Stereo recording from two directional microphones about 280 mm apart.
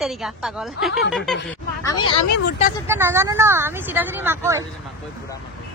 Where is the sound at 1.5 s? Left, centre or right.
Centre.